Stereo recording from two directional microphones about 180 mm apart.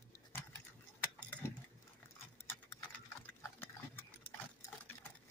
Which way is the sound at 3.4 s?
10° left (ahead or behind).